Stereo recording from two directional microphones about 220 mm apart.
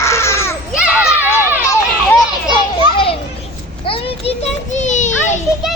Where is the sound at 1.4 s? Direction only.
10° right (ahead or behind).